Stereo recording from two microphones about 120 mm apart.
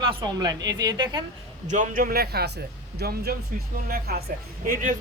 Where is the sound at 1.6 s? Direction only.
90° right.